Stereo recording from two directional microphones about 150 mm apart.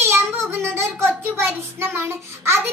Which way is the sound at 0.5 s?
15° right (ahead or behind).